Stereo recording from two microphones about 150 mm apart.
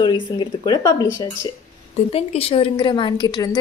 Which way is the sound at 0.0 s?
30° left (ahead or behind).